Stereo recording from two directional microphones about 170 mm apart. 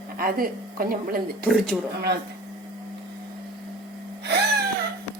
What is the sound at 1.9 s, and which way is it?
Speech, 75° right (ahead or behind).